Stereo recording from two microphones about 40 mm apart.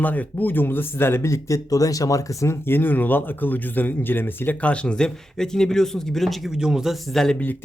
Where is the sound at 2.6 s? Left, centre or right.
Left.